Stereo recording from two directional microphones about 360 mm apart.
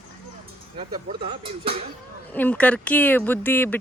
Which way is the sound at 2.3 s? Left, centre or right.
Centre.